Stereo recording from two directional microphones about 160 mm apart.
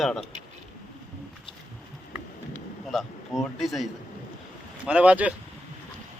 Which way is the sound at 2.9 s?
Centre (ahead or behind).